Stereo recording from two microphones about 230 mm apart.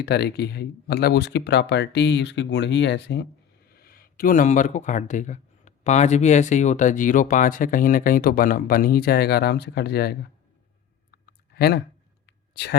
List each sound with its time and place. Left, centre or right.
0.0 s speech: left
11.1 s clicking: left
12.2 s a sound: left